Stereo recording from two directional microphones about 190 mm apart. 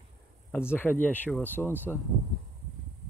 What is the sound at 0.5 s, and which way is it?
Speech, 10° left (ahead or behind).